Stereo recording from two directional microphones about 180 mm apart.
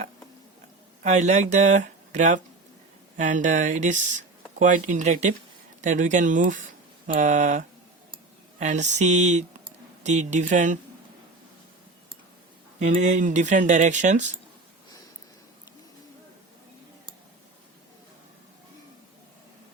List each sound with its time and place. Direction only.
1.0 s speech: 40° right (ahead or behind)
12.8 s speech: 40° right (ahead or behind)